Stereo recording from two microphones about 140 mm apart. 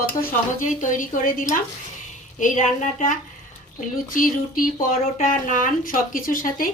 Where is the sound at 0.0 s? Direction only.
90° left.